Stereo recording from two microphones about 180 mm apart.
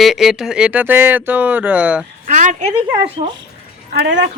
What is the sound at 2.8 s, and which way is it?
Speech, 10° right (ahead or behind).